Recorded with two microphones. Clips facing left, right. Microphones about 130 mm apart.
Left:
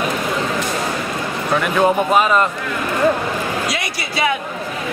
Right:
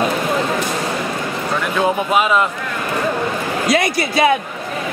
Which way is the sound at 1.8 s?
Centre (ahead or behind).